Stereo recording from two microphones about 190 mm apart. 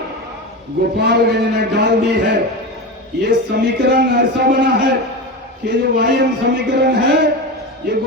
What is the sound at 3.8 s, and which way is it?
Speech, 60° right (ahead or behind).